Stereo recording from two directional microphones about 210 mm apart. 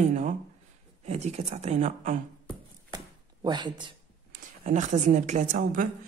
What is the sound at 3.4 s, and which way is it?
Speech, 20° right (ahead or behind).